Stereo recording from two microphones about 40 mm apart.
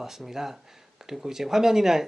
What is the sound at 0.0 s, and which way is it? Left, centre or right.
Speech, centre.